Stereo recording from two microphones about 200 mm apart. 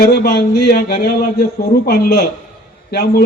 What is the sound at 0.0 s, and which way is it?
A man's voice, 50° left (ahead or behind).